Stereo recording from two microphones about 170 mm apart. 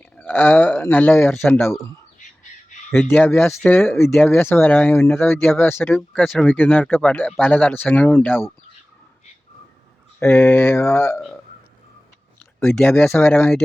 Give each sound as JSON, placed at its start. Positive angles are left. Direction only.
{"t": 0.2, "sound": "speech", "side_deg": 10}
{"t": 1.3, "sound": "speech", "side_deg": 0}
{"t": 2.1, "sound": "bird", "side_deg": 45}
{"t": 2.9, "sound": "speech", "side_deg": 10}
{"t": 6.1, "sound": "speech", "side_deg": 0}
{"t": 6.4, "sound": "speech", "side_deg": 10}
{"t": 10.2, "sound": "speech", "side_deg": 15}
{"t": 12.5, "sound": "speech", "side_deg": 5}